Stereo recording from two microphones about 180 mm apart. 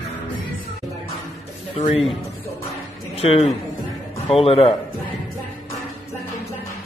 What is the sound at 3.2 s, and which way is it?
A man's voice, 35° left (ahead or behind).